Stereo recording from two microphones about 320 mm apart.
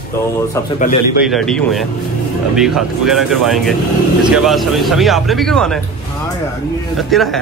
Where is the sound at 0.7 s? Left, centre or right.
Left.